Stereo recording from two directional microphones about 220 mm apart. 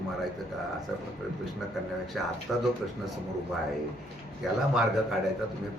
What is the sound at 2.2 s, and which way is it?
Speech, centre (ahead or behind).